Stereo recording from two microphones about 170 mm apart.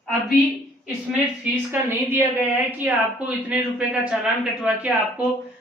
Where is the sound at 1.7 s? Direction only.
10° right (ahead or behind).